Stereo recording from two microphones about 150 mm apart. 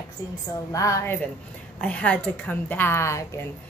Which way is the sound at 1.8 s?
10° left (ahead or behind).